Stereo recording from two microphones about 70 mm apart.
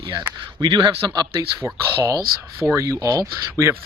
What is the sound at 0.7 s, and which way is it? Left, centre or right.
Speech, right.